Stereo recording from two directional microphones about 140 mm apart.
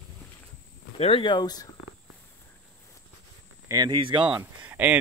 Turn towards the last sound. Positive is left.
turn(degrees=-15)  # may be behind; listen again after turning